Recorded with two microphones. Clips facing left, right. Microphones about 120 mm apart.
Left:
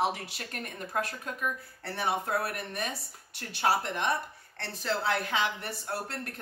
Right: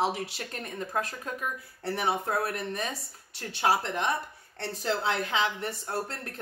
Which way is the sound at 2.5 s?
30° right (ahead or behind).